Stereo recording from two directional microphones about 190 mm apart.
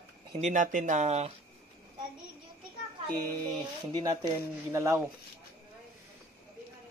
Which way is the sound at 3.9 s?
20° right (ahead or behind).